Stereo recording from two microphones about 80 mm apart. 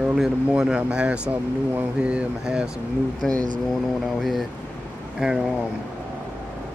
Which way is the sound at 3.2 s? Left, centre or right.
Centre.